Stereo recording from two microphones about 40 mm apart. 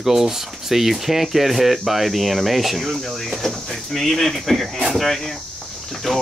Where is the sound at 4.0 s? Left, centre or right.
Centre.